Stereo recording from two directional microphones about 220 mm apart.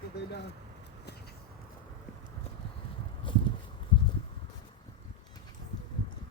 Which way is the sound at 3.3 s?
20° left (ahead or behind).